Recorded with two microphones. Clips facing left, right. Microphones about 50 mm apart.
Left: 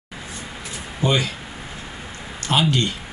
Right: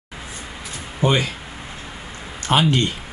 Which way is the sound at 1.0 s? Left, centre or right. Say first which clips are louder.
Right 2 dB; right.